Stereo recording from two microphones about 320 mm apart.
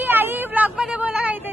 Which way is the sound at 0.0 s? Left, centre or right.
Centre.